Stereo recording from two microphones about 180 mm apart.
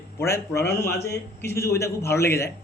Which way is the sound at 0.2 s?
15° left (ahead or behind).